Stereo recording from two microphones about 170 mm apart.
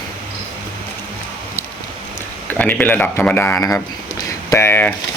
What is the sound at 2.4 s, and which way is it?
Speech, 10° left (ahead or behind).